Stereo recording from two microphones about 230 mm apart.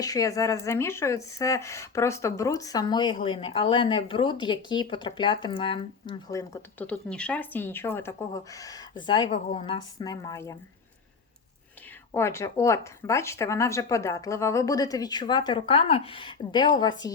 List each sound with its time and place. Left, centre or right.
0.0 s speech: centre
12.1 s speech: centre